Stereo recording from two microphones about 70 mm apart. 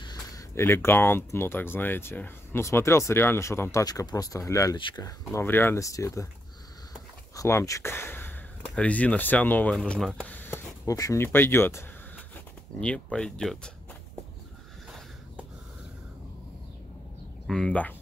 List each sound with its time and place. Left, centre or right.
0.0 s a sound: left
0.6 s speech: left
3.8 s speech: left
5.3 s speech: left
5.8 s speech: left
7.4 s speech: left
7.9 s a sound: left
8.7 s speech: centre
10.2 s a sound: left
10.9 s speech: left
11.1 s speech: left
12.8 s speech: centre
17.5 s speech: centre